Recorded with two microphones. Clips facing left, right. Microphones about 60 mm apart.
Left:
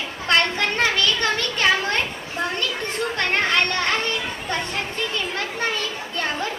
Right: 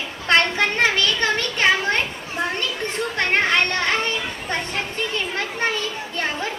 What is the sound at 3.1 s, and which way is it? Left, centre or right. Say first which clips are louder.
Children playing: right 2 dB; right.